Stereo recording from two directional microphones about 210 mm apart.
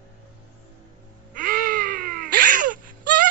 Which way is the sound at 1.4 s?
45° right (ahead or behind).